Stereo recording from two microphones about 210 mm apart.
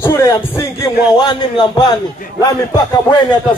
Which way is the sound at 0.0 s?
15° left (ahead or behind).